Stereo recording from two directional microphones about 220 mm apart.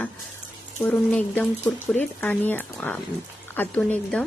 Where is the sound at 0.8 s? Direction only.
5° left (ahead or behind).